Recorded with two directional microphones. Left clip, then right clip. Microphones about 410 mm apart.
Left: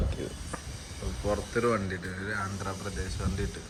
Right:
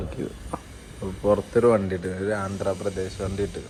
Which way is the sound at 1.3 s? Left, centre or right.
Right.